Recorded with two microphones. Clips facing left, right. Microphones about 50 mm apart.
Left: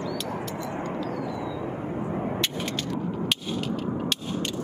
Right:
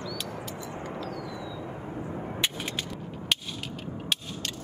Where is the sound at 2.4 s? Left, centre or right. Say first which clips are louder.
Left 3 dB; centre.